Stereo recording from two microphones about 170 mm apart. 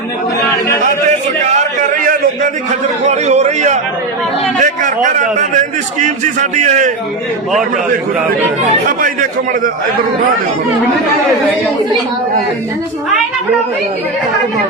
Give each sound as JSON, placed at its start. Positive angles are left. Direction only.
{"t": 1.8, "sound": "a sound", "side_deg": -55}
{"t": 3.0, "sound": "a man's voice", "side_deg": -45}
{"t": 9.0, "sound": "a man's voice", "side_deg": -55}